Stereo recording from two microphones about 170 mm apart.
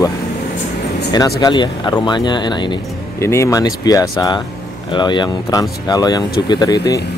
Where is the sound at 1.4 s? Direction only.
25° left (ahead or behind).